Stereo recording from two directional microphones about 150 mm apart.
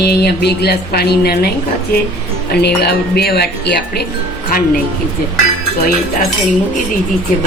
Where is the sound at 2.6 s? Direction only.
90° left.